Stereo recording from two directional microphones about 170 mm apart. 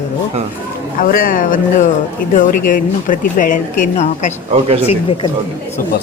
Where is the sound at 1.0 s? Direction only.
55° left (ahead or behind).